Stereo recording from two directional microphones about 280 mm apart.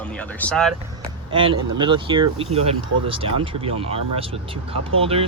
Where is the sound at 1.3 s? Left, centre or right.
Centre.